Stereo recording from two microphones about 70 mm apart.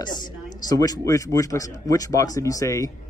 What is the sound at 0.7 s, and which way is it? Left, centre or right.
Speech, left.